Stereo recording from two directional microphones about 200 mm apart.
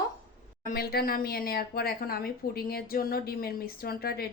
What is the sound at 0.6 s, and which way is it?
Speech, 50° left (ahead or behind).